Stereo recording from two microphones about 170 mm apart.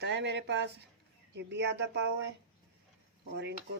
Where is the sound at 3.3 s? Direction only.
85° right.